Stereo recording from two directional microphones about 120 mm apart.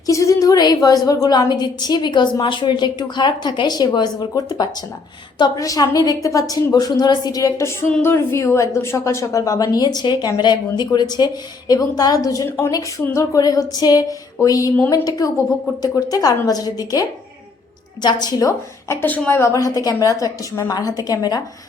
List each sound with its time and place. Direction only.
0.0 s a woman's voice: 25° left (ahead or behind)
19.0 s a woman's voice: 15° left (ahead or behind); by 21.4 s 30° left (ahead or behind)